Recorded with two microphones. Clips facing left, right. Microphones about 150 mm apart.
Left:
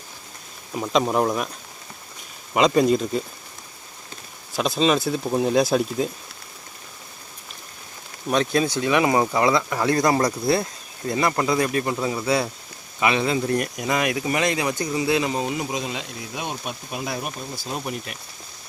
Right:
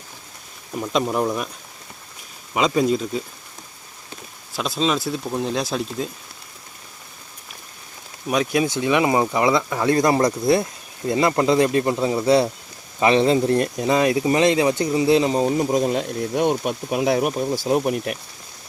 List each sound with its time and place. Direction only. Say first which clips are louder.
1.2 s speech: even; centre (ahead or behind)
2.5 s speech: left 1 dB; centre (ahead or behind)
4.5 s speech: left 2 dB; centre (ahead or behind)
8.3 s speech: right 1 dB; 10° right (ahead or behind)
8.6 s speech: right 1 dB; 20° right (ahead or behind); by 17.7 s 75° right (ahead or behind)
17.7 s speech: right 9 dB; 55° right (ahead or behind)